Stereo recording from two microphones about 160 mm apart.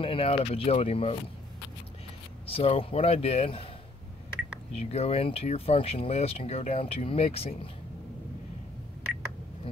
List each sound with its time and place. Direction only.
0.0 s speech: 35° left (ahead or behind)
2.5 s speech: 35° left (ahead or behind)
4.7 s speech: 40° left (ahead or behind)